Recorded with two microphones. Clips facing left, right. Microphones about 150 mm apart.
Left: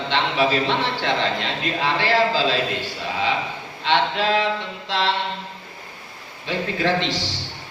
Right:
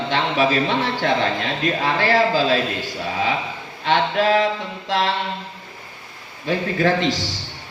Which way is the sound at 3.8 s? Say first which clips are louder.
Right 2 dB; 45° right (ahead or behind).